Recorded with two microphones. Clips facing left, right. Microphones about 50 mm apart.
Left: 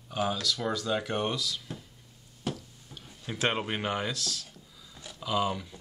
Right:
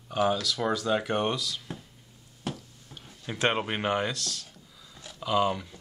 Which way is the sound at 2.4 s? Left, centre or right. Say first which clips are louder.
Left 1 dB; centre.